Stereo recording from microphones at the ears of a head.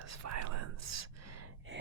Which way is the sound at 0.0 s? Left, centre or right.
Right.